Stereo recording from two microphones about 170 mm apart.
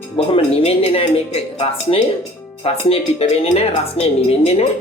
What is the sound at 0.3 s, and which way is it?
A woman's voice, 35° left (ahead or behind).